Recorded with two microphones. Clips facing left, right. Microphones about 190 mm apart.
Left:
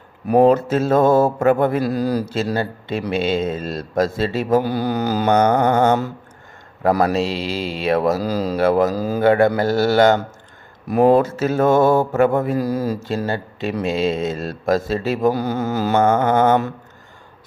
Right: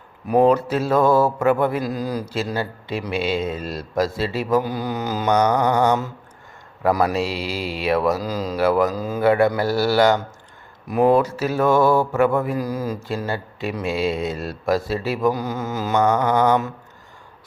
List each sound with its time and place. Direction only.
0.5 s mantra: 45° left (ahead or behind)
0.9 s mantra: 25° left (ahead or behind)
1.4 s mantra: 50° left (ahead or behind)
1.9 s speech: 35° left (ahead or behind)
3.0 s mantra: 25° left (ahead or behind)
3.8 s mantra: 50° left (ahead or behind)
4.5 s speech: 30° left (ahead or behind)
5.3 s mantra: 55° left (ahead or behind)
6.8 s mantra: 30° left (ahead or behind)
8.0 s speech: 30° left (ahead or behind)
9.6 s mantra: 25° left (ahead or behind)
10.8 s mantra: 35° left (ahead or behind)
15.0 s speech: 25° left (ahead or behind)
16.0 s mantra: 50° left (ahead or behind)